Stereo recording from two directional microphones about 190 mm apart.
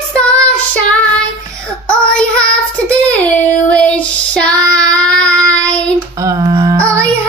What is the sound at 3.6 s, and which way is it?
Child singing, 5° left (ahead or behind).